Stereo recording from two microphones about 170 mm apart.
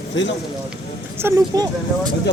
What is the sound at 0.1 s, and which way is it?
Speech, 90° left.